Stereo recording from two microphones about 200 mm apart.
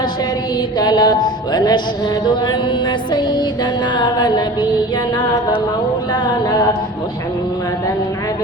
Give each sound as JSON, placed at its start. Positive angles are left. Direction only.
{"t": 0.8, "sound": "music", "side_deg": 20}
{"t": 3.1, "sound": "music", "side_deg": 20}
{"t": 6.2, "sound": "music", "side_deg": 20}